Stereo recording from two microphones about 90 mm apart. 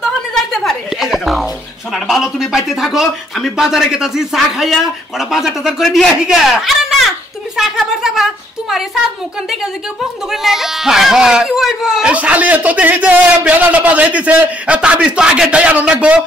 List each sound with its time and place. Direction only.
0.0 s a sound: 5° left (ahead or behind)
2.0 s a woman's voice: centre (ahead or behind)
10.3 s speech: 5° right (ahead or behind)